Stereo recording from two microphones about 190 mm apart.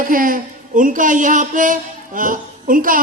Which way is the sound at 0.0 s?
45° right (ahead or behind).